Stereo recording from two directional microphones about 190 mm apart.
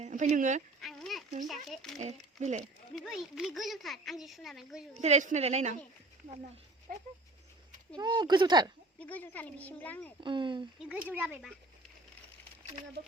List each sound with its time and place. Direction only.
0.0 s speech: 40° right (ahead or behind)
0.8 s a sound: centre (ahead or behind)
1.6 s speech: centre (ahead or behind)
2.0 s a woman's voice: 35° right (ahead or behind)
2.9 s speech: centre (ahead or behind)
4.9 s a woman's voice: 35° right (ahead or behind)
6.9 s dog: 50° right (ahead or behind)
7.9 s speech: 25° right (ahead or behind)
9.0 s speech: 10° left (ahead or behind)
10.2 s speech: 25° right (ahead or behind)
10.8 s speech: 5° right (ahead or behind)